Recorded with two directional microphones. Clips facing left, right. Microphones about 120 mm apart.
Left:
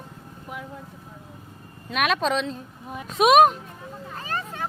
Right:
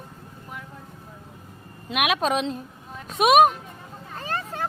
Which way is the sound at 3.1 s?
Centre (ahead or behind).